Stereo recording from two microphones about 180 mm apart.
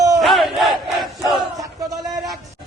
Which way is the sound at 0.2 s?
Centre (ahead or behind).